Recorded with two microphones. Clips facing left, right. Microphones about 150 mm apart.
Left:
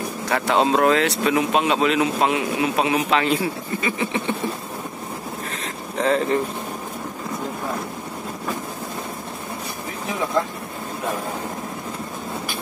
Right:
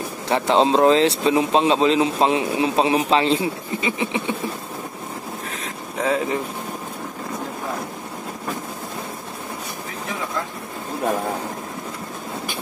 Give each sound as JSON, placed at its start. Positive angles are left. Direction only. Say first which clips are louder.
{"t": 0.3, "sound": "speech", "louder": "right 2 dB", "side_deg": -25}
{"t": 5.6, "sound": "boat", "louder": "left 2 dB", "side_deg": -5}